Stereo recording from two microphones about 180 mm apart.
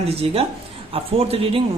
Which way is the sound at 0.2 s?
35° right (ahead or behind).